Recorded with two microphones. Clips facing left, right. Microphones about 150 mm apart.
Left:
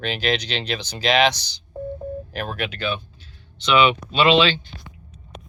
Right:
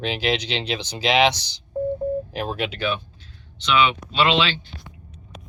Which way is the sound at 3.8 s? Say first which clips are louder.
Left 3 dB; 15° left (ahead or behind).